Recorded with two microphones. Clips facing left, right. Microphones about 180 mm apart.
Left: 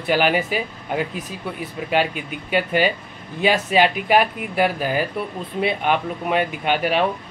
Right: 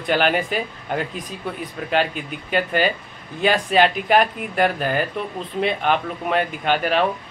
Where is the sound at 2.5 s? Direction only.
10° left (ahead or behind).